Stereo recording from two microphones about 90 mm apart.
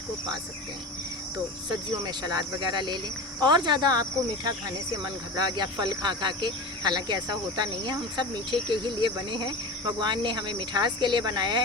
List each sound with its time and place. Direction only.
2.0 s cricket: 45° right (ahead or behind)
5.4 s speech: 55° right (ahead or behind)